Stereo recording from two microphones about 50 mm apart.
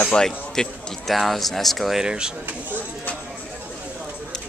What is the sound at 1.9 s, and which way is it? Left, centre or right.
Speech, centre.